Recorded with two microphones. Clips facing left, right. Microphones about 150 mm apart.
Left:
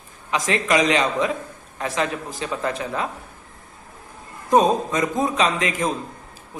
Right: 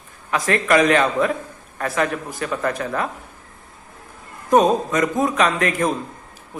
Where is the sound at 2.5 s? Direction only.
15° left (ahead or behind).